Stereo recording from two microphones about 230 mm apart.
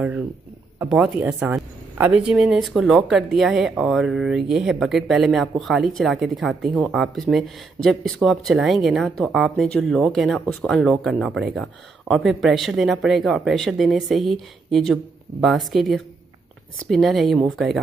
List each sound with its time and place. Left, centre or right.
0.7 s a woman's voice: centre